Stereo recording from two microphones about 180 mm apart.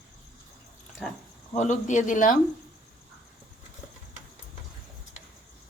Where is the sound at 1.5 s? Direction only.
40° left (ahead or behind).